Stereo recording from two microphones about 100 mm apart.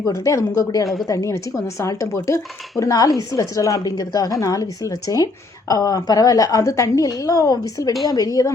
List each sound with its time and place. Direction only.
0.0 s speech: 30° left (ahead or behind)